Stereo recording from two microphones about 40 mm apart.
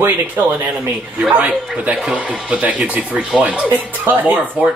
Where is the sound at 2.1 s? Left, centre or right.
Right.